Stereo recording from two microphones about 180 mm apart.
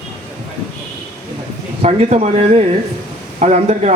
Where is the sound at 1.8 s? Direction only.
35° right (ahead or behind).